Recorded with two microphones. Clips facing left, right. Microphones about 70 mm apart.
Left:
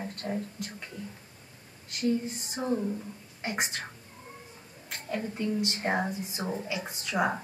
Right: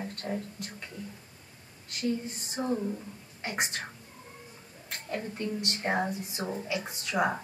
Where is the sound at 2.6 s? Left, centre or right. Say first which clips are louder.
Even; centre.